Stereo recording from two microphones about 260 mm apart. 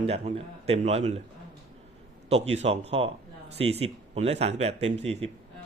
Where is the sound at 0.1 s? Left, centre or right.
Right.